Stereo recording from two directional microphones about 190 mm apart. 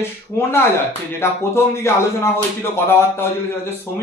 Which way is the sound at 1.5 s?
15° left (ahead or behind).